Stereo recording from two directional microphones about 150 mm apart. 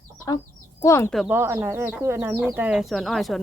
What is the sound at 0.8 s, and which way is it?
Speech, 20° left (ahead or behind).